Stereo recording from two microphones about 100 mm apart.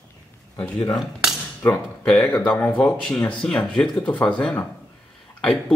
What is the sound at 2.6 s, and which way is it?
A man's voice, 15° left (ahead or behind).